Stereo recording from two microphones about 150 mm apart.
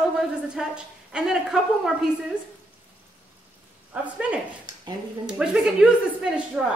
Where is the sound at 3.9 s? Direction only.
10° right (ahead or behind).